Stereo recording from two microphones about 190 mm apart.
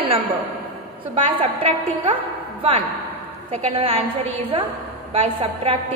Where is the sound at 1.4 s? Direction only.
30° right (ahead or behind).